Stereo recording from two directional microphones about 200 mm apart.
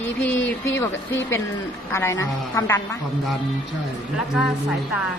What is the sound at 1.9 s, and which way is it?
Speech, 15° left (ahead or behind).